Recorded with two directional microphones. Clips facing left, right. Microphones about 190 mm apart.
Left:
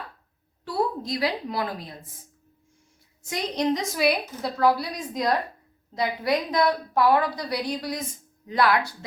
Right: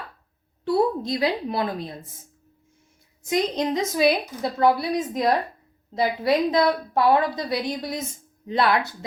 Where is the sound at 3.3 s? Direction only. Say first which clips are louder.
Right 2 dB; 20° right (ahead or behind).